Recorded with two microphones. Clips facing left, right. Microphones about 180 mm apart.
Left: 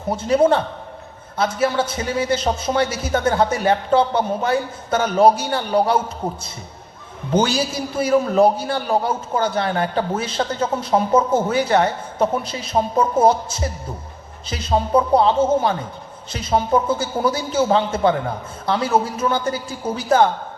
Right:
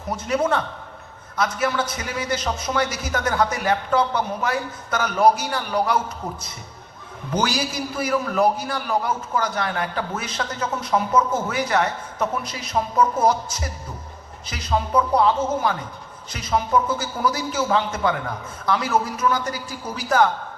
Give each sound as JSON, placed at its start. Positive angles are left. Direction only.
{"t": 0.1, "sound": "a man's voice", "side_deg": 30}